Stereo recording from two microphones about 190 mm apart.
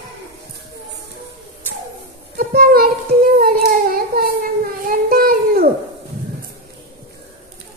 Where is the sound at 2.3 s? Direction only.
50° right (ahead or behind).